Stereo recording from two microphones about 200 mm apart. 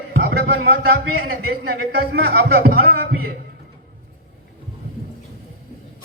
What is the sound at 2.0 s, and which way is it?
Speech, 50° right (ahead or behind).